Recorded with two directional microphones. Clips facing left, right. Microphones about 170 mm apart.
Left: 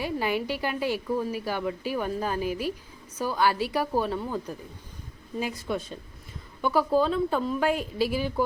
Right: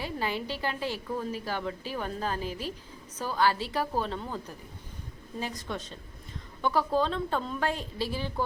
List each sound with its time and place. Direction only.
0.0 s speech: 15° left (ahead or behind)